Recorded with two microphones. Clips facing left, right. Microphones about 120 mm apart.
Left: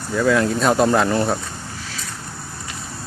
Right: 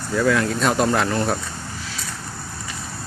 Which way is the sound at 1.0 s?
15° left (ahead or behind).